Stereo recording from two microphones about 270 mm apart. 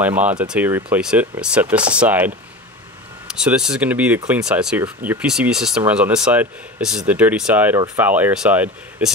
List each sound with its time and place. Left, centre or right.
0.0 s speech: centre